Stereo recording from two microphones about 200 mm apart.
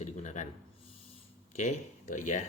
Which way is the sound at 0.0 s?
35° left (ahead or behind).